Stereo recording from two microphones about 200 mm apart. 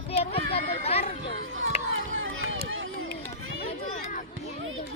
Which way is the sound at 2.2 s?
80° right.